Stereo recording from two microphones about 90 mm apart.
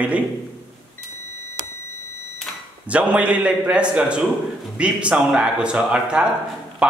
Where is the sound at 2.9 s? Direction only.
15° right (ahead or behind).